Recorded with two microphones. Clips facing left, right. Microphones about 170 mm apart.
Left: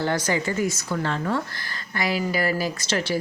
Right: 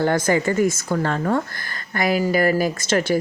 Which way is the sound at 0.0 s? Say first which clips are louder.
Right 5 dB; 50° right (ahead or behind).